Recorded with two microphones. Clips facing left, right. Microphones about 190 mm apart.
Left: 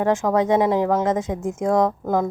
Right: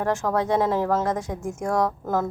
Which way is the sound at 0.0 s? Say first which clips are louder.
Left 5 dB; 15° left (ahead or behind).